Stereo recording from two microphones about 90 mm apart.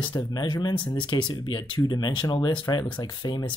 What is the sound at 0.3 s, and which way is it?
Speech, 50° left (ahead or behind).